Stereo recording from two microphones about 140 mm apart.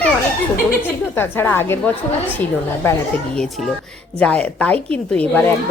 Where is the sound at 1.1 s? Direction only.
15° left (ahead or behind).